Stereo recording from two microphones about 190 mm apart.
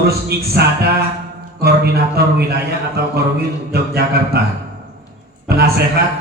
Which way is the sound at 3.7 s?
55° right (ahead or behind).